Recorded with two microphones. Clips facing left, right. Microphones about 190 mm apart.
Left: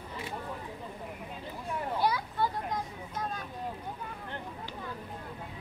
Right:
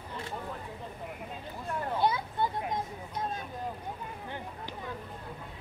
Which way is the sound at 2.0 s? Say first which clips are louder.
Right 1 dB; 25° right (ahead or behind).